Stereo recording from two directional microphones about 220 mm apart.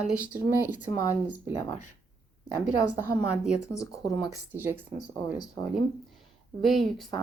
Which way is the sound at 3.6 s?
15° left (ahead or behind).